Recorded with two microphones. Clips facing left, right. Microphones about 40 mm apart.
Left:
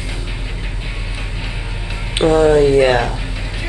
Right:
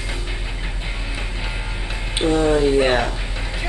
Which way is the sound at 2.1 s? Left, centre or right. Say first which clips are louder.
Left 6 dB; left.